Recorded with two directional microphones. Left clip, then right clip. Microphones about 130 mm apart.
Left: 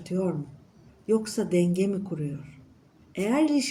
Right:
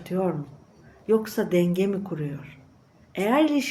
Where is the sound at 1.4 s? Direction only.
30° right (ahead or behind).